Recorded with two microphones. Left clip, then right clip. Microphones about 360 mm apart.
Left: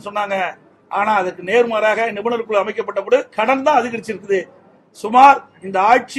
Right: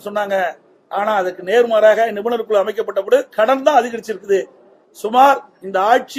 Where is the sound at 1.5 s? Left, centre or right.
Left.